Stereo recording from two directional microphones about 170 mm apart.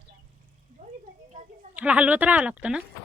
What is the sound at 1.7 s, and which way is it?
Speech, 10° right (ahead or behind).